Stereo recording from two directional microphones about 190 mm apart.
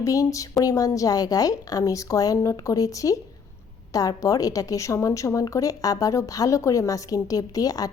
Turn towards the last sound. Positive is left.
turn(degrees=20)  # may be behind; listen again after turning